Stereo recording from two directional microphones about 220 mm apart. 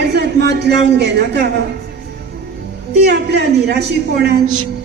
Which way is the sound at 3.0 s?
50° right (ahead or behind).